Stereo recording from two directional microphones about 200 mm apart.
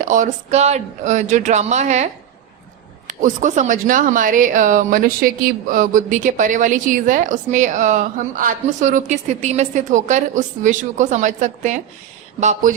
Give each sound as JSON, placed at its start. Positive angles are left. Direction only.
{"t": 0.0, "sound": "a woman's voice", "side_deg": -40}
{"t": 3.1, "sound": "a woman's voice", "side_deg": -40}